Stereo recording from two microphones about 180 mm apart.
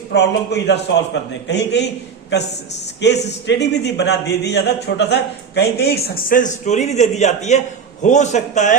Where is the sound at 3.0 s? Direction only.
75° left (ahead or behind).